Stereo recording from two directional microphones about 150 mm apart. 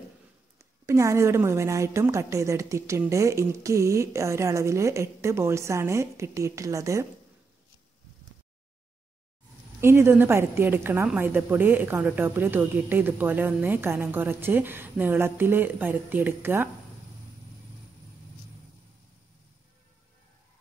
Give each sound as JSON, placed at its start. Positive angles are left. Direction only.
{"t": 0.8, "sound": "a woman's voice", "side_deg": -20}
{"t": 9.8, "sound": "a woman's voice", "side_deg": -15}